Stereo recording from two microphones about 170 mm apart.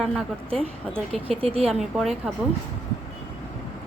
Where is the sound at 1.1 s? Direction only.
35° right (ahead or behind).